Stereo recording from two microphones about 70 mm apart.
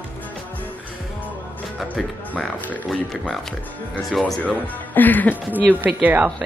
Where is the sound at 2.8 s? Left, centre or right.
Centre.